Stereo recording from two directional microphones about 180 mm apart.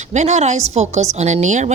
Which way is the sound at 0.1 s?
40° right (ahead or behind).